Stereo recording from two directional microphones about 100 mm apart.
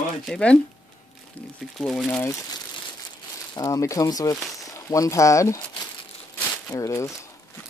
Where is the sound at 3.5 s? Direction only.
35° left (ahead or behind).